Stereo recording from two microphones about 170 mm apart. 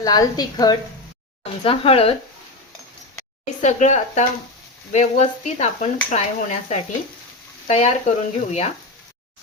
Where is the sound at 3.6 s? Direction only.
45° left (ahead or behind).